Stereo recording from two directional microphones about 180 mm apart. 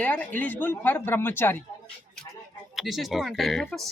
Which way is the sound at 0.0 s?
10° left (ahead or behind).